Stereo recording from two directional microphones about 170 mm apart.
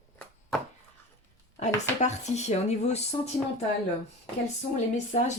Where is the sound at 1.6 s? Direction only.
45° left (ahead or behind).